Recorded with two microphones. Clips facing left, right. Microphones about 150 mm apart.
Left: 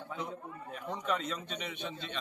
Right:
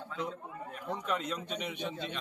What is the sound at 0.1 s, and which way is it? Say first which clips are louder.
Speech: right 2 dB; 10° left (ahead or behind).